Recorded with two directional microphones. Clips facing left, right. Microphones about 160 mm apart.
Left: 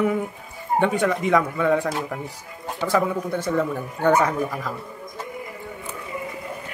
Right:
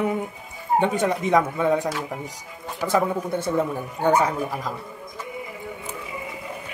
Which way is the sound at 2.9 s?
25° right (ahead or behind).